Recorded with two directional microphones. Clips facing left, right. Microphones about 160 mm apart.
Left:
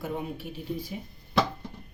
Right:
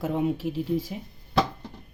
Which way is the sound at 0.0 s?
90° right.